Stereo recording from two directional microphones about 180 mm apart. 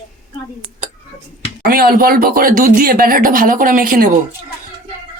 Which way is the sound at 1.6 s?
55° right (ahead or behind).